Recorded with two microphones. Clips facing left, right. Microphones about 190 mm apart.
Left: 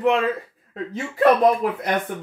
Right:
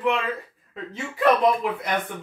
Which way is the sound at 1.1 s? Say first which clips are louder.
Left 3 dB; 40° left (ahead or behind).